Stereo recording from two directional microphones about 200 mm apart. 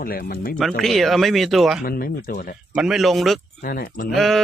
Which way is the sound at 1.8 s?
45° left (ahead or behind).